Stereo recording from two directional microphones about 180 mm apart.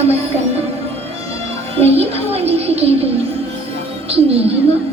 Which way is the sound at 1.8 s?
35° right (ahead or behind).